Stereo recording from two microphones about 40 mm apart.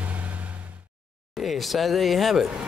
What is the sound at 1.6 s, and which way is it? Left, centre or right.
Speech, centre.